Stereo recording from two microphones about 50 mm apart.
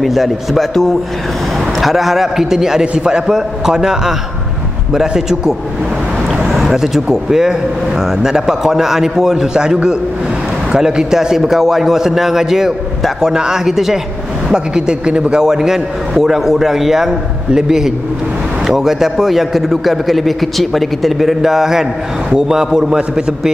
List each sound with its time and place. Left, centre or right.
0.0 s a man's voice: centre
10.8 s a man's voice: centre